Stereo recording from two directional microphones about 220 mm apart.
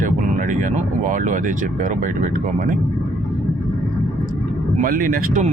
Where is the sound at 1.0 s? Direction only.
35° right (ahead or behind).